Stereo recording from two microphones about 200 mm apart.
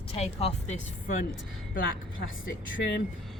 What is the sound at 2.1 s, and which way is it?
Speech, 75° left (ahead or behind).